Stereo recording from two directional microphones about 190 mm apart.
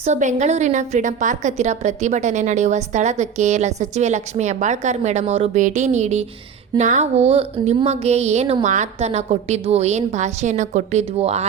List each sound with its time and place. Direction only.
0.0 s a woman's voice: 40° right (ahead or behind)